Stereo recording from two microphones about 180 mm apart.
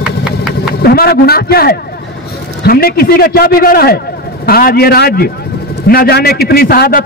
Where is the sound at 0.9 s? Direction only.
60° left (ahead or behind).